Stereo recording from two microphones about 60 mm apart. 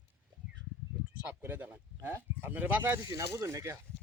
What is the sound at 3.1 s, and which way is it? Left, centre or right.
Speech, right.